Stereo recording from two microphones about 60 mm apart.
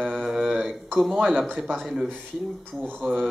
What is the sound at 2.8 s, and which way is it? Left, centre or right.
Speech, centre.